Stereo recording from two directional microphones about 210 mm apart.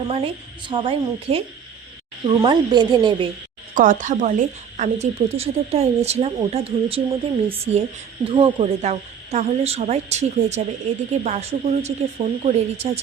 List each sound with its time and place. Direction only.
0.1 s a woman's voice: 25° right (ahead or behind)
3.8 s speech: 35° right (ahead or behind)